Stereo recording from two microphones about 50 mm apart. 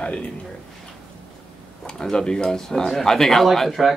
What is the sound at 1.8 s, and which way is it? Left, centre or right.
Speech, centre.